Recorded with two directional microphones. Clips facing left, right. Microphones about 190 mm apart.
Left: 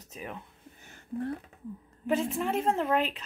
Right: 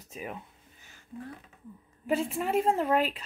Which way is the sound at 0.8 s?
55° left (ahead or behind).